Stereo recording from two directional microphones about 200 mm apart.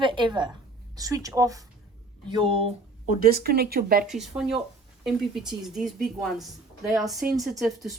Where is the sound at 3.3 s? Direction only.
50° right (ahead or behind).